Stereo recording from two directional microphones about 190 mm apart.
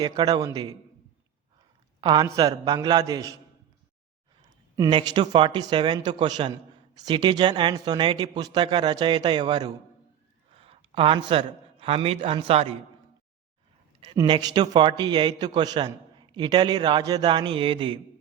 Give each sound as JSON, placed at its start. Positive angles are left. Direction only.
{"t": 0.0, "sound": "a man's voice", "side_deg": -20}
{"t": 2.0, "sound": "a man's voice", "side_deg": -25}
{"t": 4.8, "sound": "a man's voice", "side_deg": -25}
{"t": 14.0, "sound": "a man's voice", "side_deg": -25}